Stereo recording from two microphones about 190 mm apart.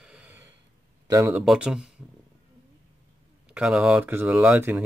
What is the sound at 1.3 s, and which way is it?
Speech, 5° right (ahead or behind).